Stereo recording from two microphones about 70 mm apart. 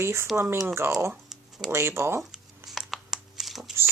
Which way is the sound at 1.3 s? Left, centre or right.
Centre.